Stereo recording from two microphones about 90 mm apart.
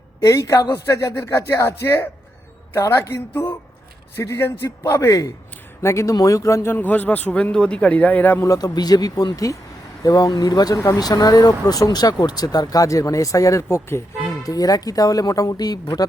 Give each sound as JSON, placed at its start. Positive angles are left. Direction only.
{"t": 0.2, "sound": "a man's voice", "side_deg": 35}
{"t": 8.4, "sound": "speech", "side_deg": 45}
{"t": 14.4, "sound": "speech", "side_deg": 40}